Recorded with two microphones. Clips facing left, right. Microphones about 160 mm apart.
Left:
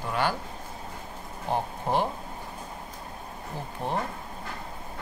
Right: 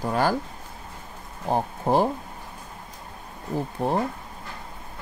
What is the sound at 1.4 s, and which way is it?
Speech, 40° right (ahead or behind).